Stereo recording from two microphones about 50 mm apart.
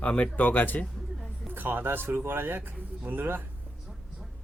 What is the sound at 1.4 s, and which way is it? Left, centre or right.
Speech, right.